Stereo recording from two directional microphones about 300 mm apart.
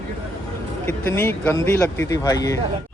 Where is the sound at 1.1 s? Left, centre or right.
Centre.